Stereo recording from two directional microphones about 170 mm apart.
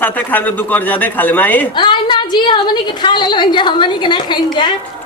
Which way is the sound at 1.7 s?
25° left (ahead or behind).